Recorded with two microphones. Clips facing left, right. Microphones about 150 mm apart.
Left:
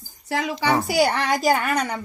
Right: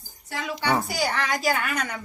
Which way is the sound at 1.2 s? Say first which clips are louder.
Left 5 dB; 45° left (ahead or behind).